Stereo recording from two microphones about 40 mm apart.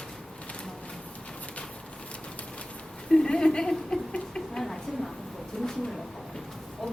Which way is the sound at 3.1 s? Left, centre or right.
Centre.